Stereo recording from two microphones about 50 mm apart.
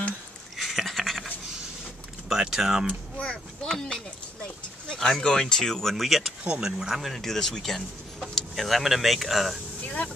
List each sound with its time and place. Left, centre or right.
0.6 s a sound: centre
2.5 s speech: centre
3.6 s speech: centre
4.9 s a sound: centre
5.2 s speech: centre
6.4 s speech: right
6.8 s speech: centre
9.8 s vehicle: left